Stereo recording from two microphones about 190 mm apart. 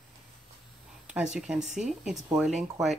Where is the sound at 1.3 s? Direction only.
Centre (ahead or behind).